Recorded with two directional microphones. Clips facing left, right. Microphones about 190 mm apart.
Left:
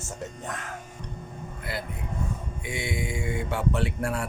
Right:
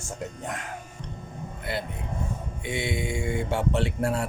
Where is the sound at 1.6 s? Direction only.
25° right (ahead or behind).